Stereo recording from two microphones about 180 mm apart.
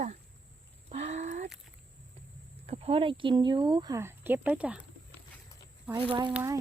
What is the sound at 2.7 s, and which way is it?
Speech, 35° right (ahead or behind).